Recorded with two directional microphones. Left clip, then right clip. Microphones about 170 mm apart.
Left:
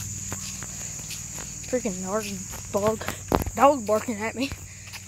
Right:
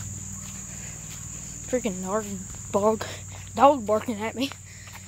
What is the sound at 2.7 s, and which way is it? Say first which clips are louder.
Speech: right 2 dB; 20° right (ahead or behind).